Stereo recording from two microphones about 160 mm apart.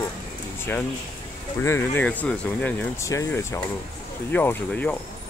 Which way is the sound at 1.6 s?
15° left (ahead or behind).